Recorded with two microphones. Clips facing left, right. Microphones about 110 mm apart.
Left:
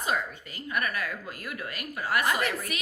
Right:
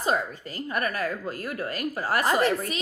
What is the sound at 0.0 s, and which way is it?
A woman's voice, 35° right (ahead or behind).